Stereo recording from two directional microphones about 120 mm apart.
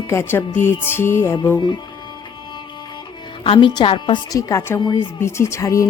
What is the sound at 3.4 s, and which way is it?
Speech, 45° left (ahead or behind).